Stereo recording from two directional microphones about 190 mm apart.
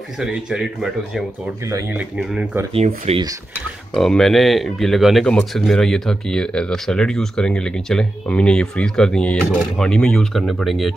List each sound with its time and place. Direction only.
0.2 s speech: 5° right (ahead or behind)
1.7 s speech: 10° right (ahead or behind)
3.1 s speech: 25° right (ahead or behind)
3.9 s speech: 5° left (ahead or behind)